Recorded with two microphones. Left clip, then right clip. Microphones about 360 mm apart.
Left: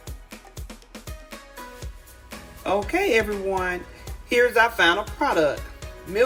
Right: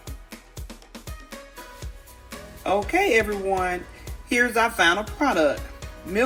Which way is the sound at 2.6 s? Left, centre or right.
Centre.